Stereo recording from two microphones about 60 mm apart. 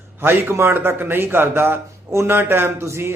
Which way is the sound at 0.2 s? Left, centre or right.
Right.